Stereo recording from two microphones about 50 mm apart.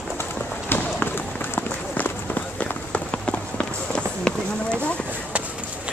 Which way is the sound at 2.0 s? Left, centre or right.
Left.